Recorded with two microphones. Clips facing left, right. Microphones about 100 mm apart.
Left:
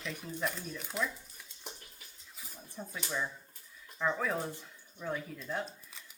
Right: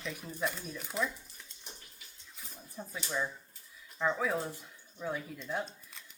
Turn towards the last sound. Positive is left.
turn(degrees=0)  # may be behind; listen again after turning